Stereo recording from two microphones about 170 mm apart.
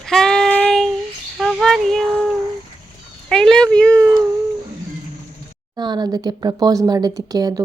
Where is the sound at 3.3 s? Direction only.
5° left (ahead or behind).